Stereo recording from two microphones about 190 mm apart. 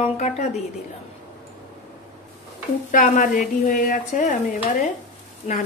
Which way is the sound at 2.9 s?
45° left (ahead or behind).